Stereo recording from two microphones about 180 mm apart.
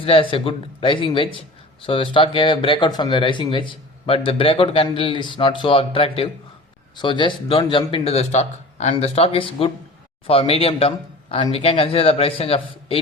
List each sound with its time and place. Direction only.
0.0 s speech: 30° left (ahead or behind)